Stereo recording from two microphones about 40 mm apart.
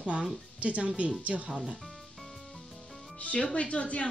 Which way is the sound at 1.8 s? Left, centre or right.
Centre.